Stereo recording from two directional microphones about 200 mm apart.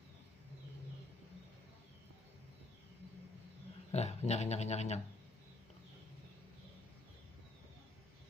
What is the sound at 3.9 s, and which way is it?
Speech, 35° left (ahead or behind).